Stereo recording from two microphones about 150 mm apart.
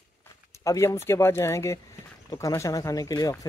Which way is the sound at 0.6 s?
20° left (ahead or behind).